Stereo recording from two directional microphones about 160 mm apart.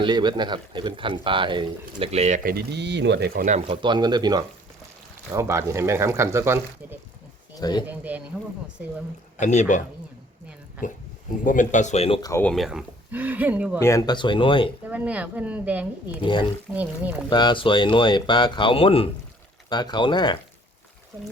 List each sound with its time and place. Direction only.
0.0 s speech: 25° right (ahead or behind); by 2.4 s 45° right (ahead or behind)
2.4 s speech: 70° right (ahead or behind)
3.7 s speech: 30° right (ahead or behind)
7.5 s speech: 25° left (ahead or behind)
7.9 s speech: 10° right (ahead or behind)
9.4 s speech: 50° left (ahead or behind)
11.4 s speech: 55° left (ahead or behind)
12.4 s speech: 5° left (ahead or behind)
13.7 s speech: 20° left (ahead or behind)
14.8 s speech: 10° right (ahead or behind)
16.2 s speech: 30° left (ahead or behind)
16.7 s speech: 10° right (ahead or behind)
17.2 s speech: 30° left (ahead or behind)